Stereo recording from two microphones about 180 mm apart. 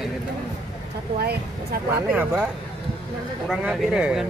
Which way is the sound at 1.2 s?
65° right (ahead or behind).